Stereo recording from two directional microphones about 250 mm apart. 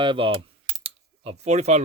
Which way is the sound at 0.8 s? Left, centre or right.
Right.